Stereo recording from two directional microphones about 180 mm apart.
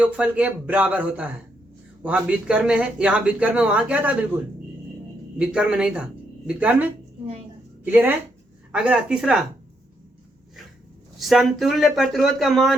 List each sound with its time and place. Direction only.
0.0 s speech: 5° right (ahead or behind)
5.4 s speech: 5° right (ahead or behind)
7.9 s speech: 10° right (ahead or behind)
11.2 s speech: centre (ahead or behind)